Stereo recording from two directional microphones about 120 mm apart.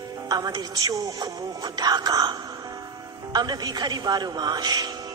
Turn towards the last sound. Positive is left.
turn(degrees=-35)  # may be behind; listen again after turning